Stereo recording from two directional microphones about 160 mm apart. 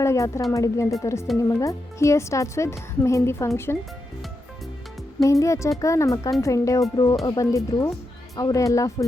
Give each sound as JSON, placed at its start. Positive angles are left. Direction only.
{"t": 0.0, "sound": "speech", "side_deg": 20}
{"t": 5.2, "sound": "speech", "side_deg": 20}